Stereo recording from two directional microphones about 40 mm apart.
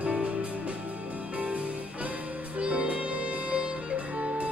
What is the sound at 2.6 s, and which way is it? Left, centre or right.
Music, right.